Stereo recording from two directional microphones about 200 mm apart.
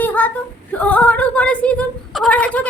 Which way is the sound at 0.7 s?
5° left (ahead or behind).